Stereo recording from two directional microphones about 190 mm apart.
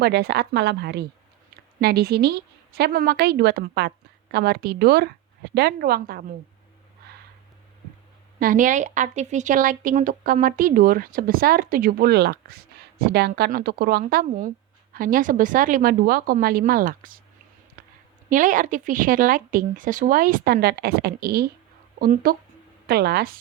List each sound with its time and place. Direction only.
0.0 s a woman's voice: 60° right (ahead or behind)
8.4 s a woman's voice: 45° right (ahead or behind)
17.8 s a sound: 50° right (ahead or behind)
18.3 s a woman's voice: 45° right (ahead or behind)